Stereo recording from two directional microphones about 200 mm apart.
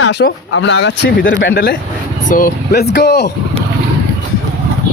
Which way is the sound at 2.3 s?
50° left (ahead or behind).